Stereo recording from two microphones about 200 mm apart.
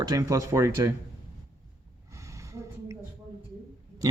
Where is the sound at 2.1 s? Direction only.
15° right (ahead or behind).